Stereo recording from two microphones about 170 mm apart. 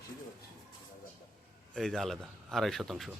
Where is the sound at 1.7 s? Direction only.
Centre (ahead or behind).